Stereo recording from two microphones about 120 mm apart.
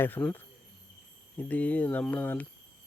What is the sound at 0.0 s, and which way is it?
Speech, 15° left (ahead or behind).